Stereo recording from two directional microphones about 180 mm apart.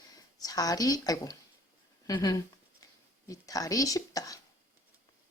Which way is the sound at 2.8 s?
20° left (ahead or behind).